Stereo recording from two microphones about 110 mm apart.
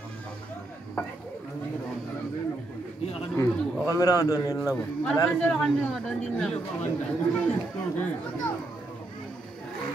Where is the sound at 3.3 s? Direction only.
30° left (ahead or behind).